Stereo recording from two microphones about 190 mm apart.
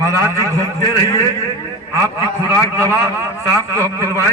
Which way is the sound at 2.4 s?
15° right (ahead or behind).